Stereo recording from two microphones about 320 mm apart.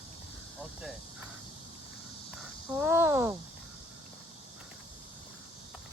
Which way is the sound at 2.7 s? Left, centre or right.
Centre.